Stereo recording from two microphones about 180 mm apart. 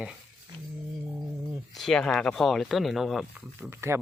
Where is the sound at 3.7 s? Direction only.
15° right (ahead or behind).